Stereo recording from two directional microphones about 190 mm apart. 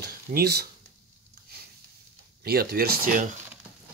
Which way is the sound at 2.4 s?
55° right (ahead or behind).